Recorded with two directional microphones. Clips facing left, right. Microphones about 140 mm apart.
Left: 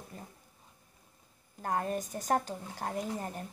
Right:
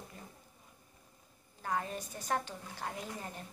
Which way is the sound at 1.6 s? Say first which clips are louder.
Left 4 dB; 50° left (ahead or behind).